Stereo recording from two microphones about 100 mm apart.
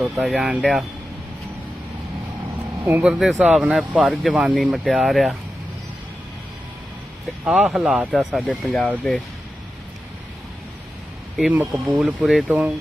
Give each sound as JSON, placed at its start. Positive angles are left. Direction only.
{"t": 0.0, "sound": "speech", "side_deg": -5}
{"t": 2.8, "sound": "speech", "side_deg": -20}
{"t": 3.1, "sound": "speech", "side_deg": 0}
{"t": 7.4, "sound": "speech", "side_deg": -10}
{"t": 11.5, "sound": "speech", "side_deg": -15}
{"t": 11.9, "sound": "speech", "side_deg": -5}
{"t": 12.5, "sound": "speech", "side_deg": -15}